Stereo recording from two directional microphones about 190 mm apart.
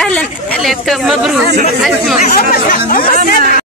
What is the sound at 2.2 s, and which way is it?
Speech, 50° left (ahead or behind).